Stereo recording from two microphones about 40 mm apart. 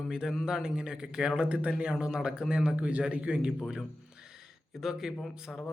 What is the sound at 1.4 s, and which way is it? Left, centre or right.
Speech, right.